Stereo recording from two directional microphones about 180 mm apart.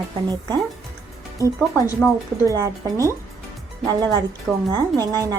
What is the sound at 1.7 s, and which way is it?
Speech, 15° left (ahead or behind).